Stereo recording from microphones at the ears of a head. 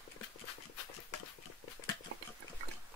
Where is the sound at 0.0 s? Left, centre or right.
Left.